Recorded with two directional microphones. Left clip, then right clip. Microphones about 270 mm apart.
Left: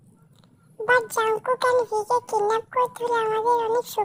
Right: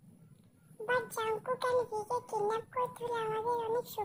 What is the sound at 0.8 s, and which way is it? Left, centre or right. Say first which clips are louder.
Speech: left 13 dB; left.